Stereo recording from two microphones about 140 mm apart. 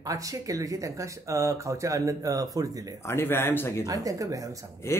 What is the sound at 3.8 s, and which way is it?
Speech, 25° right (ahead or behind).